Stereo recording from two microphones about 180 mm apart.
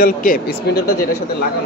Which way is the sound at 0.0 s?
50° left (ahead or behind).